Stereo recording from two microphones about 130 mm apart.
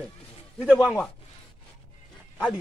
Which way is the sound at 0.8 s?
10° left (ahead or behind).